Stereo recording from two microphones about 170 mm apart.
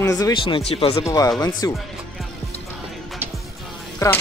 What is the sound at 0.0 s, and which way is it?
Speech, 20° left (ahead or behind).